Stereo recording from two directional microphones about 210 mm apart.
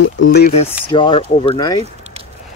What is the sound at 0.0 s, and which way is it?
Speech, 55° left (ahead or behind).